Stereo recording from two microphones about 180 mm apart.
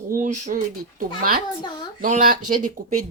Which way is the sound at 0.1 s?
45° right (ahead or behind).